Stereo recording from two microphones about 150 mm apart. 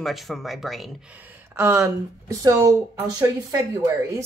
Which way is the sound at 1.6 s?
15° right (ahead or behind).